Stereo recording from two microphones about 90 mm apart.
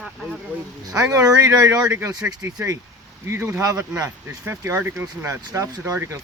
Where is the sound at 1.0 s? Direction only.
40° right (ahead or behind); by 5.1 s 25° right (ahead or behind).